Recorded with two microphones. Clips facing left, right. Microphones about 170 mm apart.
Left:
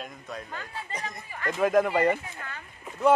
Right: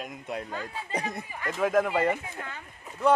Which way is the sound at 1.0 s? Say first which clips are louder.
Even; 10° right (ahead or behind).